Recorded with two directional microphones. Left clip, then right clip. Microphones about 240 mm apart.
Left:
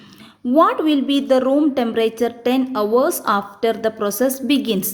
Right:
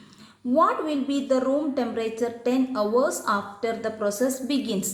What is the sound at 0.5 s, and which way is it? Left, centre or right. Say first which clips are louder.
A woman's voice: left 7 dB; left.